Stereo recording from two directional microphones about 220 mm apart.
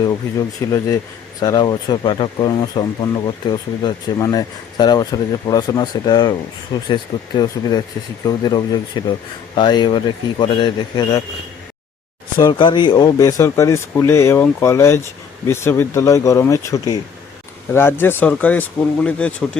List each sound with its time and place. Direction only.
0.3 s speech: 15° left (ahead or behind)
12.4 s speech: 20° left (ahead or behind)